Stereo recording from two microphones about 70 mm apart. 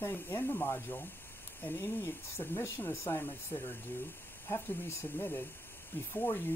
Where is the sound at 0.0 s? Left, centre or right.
Left.